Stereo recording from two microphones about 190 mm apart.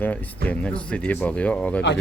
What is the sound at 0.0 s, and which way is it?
Speech, 10° left (ahead or behind).